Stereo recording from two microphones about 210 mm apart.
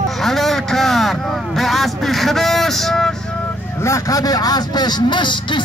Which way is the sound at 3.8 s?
15° left (ahead or behind).